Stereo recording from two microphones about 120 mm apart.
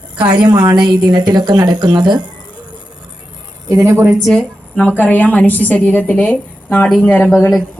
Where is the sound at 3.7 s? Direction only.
25° right (ahead or behind).